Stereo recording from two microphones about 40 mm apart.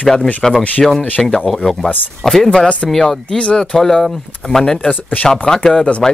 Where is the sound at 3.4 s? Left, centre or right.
Left.